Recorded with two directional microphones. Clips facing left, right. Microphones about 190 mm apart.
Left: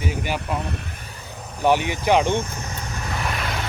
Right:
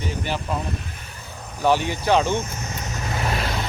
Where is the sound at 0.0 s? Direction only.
10° left (ahead or behind).